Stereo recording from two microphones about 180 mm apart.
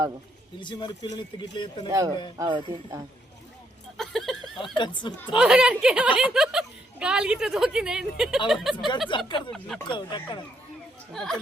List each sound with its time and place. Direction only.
0.6 s speech: 25° left (ahead or behind)
1.9 s speech: 20° right (ahead or behind)
3.9 s a sound: centre (ahead or behind)
4.6 s speech: 25° left (ahead or behind)
5.4 s a woman's voice: 5° right (ahead or behind)
9.0 s speech: 25° left (ahead or behind)
9.5 s a woman's voice: 5° left (ahead or behind)
9.8 s speech: 25° left (ahead or behind)
11.1 s a woman's voice: centre (ahead or behind)